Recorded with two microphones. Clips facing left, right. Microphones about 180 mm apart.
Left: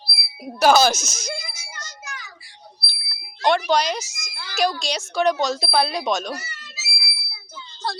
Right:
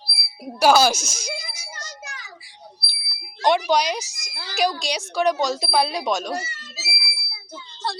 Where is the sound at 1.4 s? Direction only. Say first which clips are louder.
Even; 35° right (ahead or behind).